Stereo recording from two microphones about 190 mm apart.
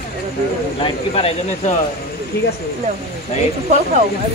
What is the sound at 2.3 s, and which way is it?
Speech, 55° left (ahead or behind).